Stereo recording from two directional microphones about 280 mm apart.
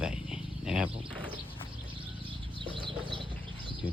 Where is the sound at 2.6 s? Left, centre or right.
Centre.